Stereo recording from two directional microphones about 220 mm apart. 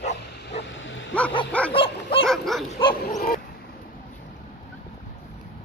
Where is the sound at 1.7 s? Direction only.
25° left (ahead or behind).